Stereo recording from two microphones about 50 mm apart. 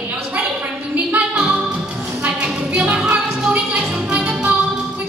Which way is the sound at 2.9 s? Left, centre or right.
Right.